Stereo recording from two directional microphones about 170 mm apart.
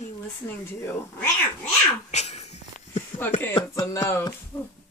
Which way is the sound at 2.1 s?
40° left (ahead or behind).